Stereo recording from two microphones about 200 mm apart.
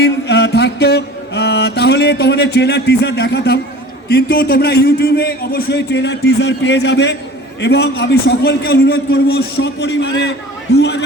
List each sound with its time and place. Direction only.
0.0 s mantra: 60° left (ahead or behind)
4.1 s a man's voice: 50° left (ahead or behind)